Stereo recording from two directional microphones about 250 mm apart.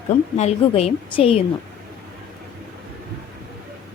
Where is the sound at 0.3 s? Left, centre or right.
Left.